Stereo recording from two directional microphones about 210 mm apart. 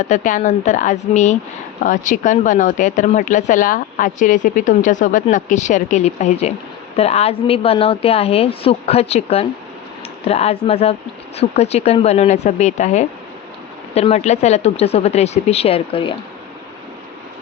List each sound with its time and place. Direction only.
0.1 s a woman's voice: 40° left (ahead or behind)